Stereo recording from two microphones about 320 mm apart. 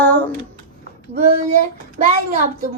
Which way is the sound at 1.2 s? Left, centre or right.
Right.